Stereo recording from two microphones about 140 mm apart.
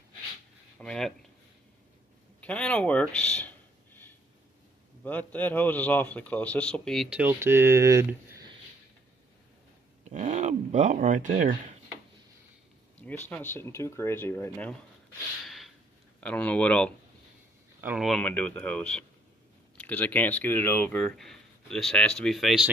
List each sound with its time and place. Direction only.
0.7 s speech: 5° left (ahead or behind)
2.4 s speech: 10° left (ahead or behind)
7.2 s speech: 15° right (ahead or behind)
10.0 s a sound: 55° right (ahead or behind)
13.0 s speech: 10° left (ahead or behind)
15.4 s a sound: centre (ahead or behind)
16.2 s speech: 10° left (ahead or behind)
17.7 s speech: 15° right (ahead or behind)
18.0 s speech: 5° left (ahead or behind)